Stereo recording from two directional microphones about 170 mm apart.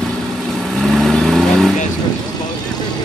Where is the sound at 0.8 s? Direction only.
Centre (ahead or behind).